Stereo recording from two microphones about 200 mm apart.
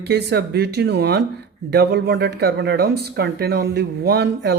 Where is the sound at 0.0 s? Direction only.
55° right (ahead or behind).